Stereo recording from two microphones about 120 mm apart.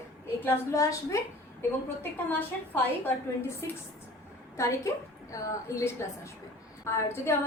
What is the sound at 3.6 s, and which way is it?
A woman's voice, 25° left (ahead or behind).